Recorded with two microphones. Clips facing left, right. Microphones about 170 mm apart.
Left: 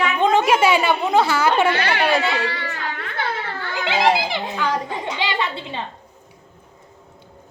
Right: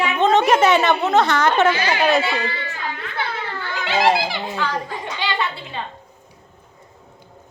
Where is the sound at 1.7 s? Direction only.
65° left (ahead or behind).